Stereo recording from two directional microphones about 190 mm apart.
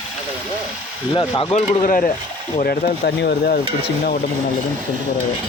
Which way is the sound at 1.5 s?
40° left (ahead or behind).